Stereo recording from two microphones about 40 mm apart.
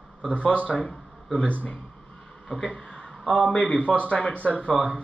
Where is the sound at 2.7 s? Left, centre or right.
Left.